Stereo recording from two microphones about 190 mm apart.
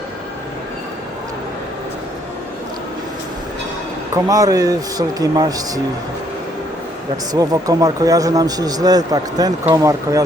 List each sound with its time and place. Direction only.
4.1 s speech: 20° right (ahead or behind)
7.3 s speech: 20° right (ahead or behind)